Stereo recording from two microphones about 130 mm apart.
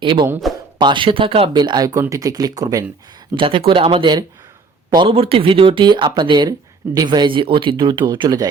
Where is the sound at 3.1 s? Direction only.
40° right (ahead or behind).